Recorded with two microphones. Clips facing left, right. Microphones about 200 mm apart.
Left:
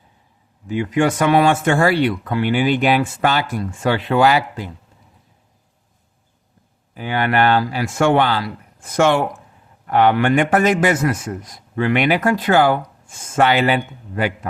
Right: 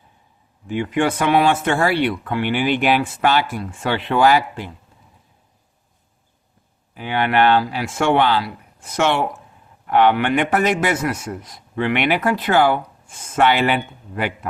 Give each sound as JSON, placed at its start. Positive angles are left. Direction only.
{"t": 0.8, "sound": "a man's voice", "side_deg": 40}
{"t": 6.9, "sound": "a man's voice", "side_deg": 45}